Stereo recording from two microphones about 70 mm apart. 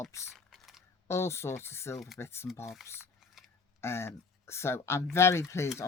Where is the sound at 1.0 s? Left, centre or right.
Left.